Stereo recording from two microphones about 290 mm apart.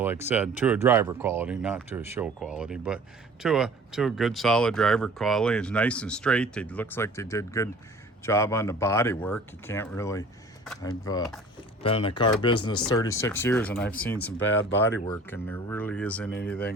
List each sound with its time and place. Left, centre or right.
0.0 s speech: centre
14.3 s speech: left
14.7 s speech: centre